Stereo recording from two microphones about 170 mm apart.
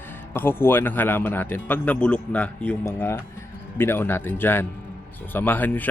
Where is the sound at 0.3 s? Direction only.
10° left (ahead or behind).